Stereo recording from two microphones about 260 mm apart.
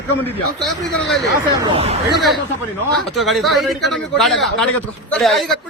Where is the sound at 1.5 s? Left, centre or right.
Right.